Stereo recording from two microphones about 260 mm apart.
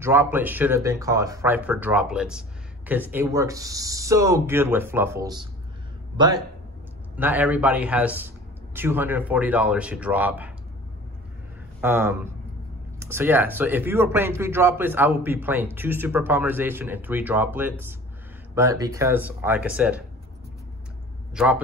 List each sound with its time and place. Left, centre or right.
0.0 s a man's voice: centre
11.8 s a man's voice: centre